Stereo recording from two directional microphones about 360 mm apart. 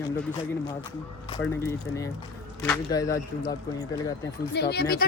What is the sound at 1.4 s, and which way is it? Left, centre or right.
Speech, centre.